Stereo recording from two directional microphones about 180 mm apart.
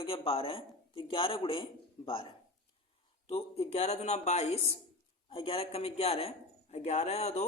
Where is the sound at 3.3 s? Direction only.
35° left (ahead or behind).